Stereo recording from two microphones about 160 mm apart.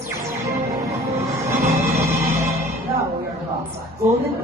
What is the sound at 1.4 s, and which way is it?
Music, 20° right (ahead or behind).